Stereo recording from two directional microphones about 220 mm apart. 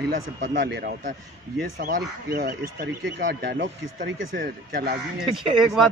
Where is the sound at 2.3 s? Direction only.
45° right (ahead or behind).